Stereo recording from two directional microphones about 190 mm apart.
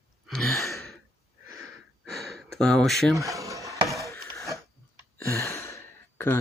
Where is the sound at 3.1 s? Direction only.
15° right (ahead or behind).